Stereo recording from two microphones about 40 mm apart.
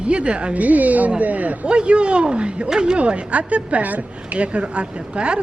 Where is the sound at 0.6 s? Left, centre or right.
Right.